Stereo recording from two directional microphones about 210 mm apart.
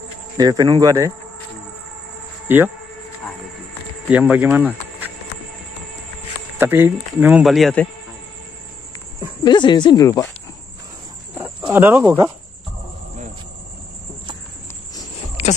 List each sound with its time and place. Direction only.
0.4 s speech: 20° right (ahead or behind)
2.4 s speech: 10° right (ahead or behind)
4.1 s speech: 5° right (ahead or behind)
6.6 s speech: 10° right (ahead or behind)
9.4 s speech: 20° left (ahead or behind)
11.7 s speech: 10° right (ahead or behind)
15.4 s a sound: 30° left (ahead or behind)